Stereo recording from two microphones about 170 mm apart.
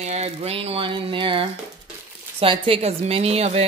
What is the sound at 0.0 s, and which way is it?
Speech, 40° right (ahead or behind).